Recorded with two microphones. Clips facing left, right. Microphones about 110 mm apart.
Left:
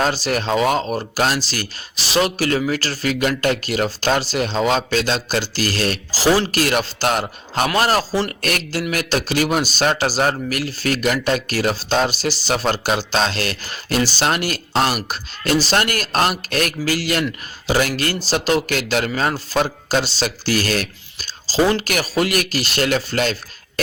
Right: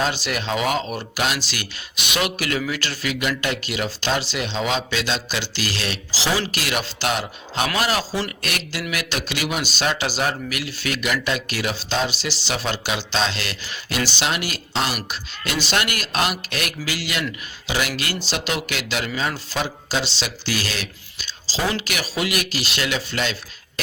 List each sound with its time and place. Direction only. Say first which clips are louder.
0.0 s speech: left 4 dB; 40° left (ahead or behind)